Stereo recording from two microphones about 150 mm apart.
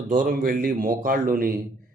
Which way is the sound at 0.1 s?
65° right (ahead or behind).